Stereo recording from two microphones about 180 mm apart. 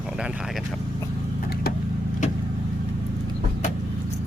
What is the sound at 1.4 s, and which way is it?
Vehicle, 60° left (ahead or behind).